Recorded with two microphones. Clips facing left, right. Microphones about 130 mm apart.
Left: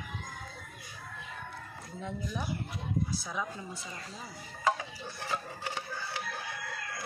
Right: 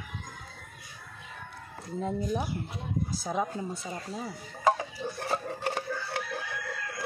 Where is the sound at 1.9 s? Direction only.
40° right (ahead or behind).